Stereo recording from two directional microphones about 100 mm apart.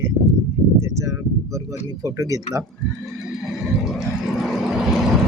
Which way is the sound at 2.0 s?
35° right (ahead or behind).